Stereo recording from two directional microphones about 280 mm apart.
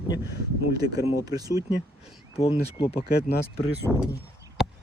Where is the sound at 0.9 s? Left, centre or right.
Centre.